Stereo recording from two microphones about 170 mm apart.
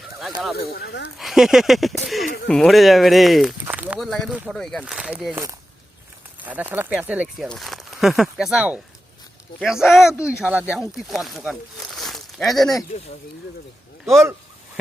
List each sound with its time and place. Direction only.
0.0 s a sound: centre (ahead or behind)
0.5 s speech: 70° left (ahead or behind)
1.2 s speech: centre (ahead or behind)
6.4 s speech: 10° right (ahead or behind)